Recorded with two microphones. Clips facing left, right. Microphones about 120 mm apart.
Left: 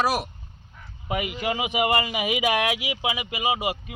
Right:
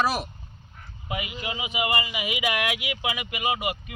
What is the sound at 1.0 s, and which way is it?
Speech, 50° left (ahead or behind).